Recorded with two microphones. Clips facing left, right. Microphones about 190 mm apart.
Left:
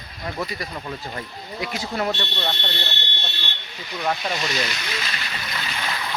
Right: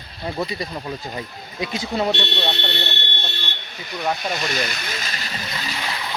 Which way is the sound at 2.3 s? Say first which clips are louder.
Right 3 dB; 70° right (ahead or behind).